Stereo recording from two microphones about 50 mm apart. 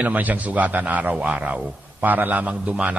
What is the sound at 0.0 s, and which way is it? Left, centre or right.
A man's voice, right.